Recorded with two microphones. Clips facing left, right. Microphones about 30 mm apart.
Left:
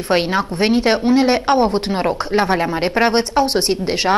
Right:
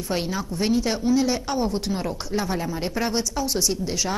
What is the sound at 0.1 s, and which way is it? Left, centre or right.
A woman's voice, left.